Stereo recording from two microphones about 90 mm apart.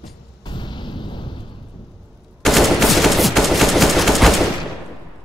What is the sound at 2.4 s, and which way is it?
Gunshot, centre (ahead or behind).